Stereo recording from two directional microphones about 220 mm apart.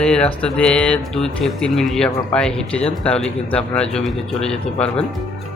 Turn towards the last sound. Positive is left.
turn(degrees=5)  # may be behind; listen again after turning